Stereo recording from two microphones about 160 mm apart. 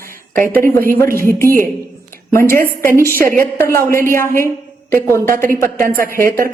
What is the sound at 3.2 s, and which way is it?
Speech, 60° right (ahead or behind).